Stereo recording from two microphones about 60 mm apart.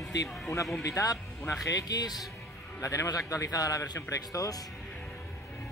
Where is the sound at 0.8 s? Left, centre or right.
Left.